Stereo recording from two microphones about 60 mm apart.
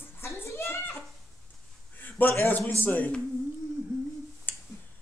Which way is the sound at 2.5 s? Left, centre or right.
Left.